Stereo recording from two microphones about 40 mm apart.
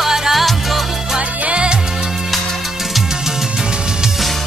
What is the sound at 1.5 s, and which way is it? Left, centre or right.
Music, right.